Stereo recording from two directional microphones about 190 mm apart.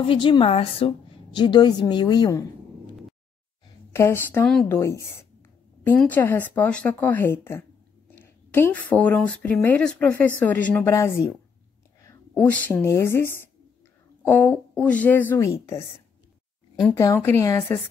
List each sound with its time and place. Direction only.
0.0 s a woman's voice: 25° left (ahead or behind)
3.9 s speech: 15° left (ahead or behind)
16.8 s speech: 15° left (ahead or behind)